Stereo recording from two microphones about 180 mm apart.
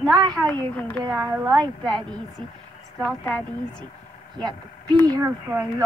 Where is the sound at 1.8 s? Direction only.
5° left (ahead or behind).